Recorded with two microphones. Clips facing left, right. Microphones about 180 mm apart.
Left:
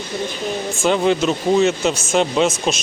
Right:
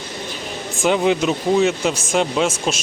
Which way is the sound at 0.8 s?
10° right (ahead or behind).